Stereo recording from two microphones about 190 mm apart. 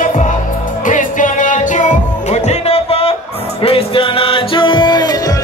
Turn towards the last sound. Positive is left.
turn(degrees=20)  # may be behind; listen again after turning